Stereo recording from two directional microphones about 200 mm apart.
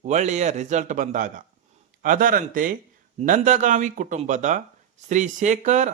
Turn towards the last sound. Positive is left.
turn(degrees=-35)  # may be behind; listen again after turning